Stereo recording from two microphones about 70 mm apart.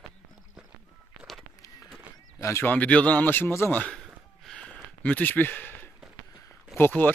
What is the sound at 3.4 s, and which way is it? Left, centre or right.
Speech, left.